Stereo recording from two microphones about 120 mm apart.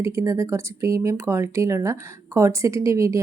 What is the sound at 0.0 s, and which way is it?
A woman's voice, 25° right (ahead or behind).